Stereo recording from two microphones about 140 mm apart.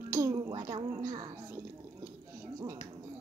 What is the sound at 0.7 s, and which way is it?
Speech, 40° right (ahead or behind).